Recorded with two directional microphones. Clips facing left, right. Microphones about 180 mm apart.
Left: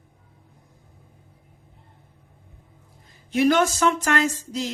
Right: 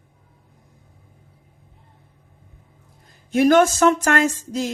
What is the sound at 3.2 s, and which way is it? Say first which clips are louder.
A woman's voice: right 4 dB; 45° right (ahead or behind).